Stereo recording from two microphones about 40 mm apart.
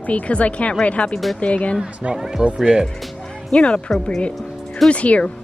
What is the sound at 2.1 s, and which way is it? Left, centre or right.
Speech, centre.